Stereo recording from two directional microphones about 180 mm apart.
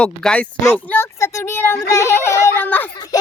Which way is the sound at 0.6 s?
10° left (ahead or behind).